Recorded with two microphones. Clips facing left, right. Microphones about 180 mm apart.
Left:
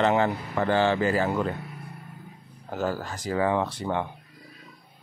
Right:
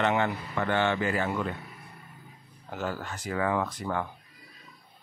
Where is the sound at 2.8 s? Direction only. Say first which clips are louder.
Left 5 dB; 40° left (ahead or behind); by 4.1 s 25° left (ahead or behind).